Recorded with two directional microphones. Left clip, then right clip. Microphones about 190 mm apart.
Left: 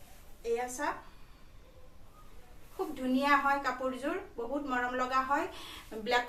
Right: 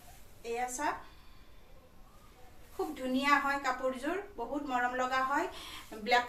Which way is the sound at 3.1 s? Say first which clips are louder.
Left 2 dB; 10° left (ahead or behind).